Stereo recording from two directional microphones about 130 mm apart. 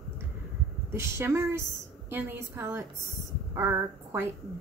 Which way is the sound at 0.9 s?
20° right (ahead or behind).